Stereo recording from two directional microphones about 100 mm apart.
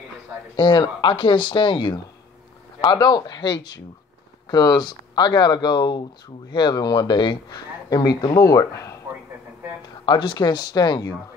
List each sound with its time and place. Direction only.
0.6 s a man's voice: 55° left (ahead or behind); by 9.0 s 35° left (ahead or behind)
10.0 s a man's voice: 50° left (ahead or behind)